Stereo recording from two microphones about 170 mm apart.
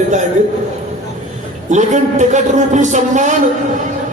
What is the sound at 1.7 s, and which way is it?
A man's voice, 45° right (ahead or behind).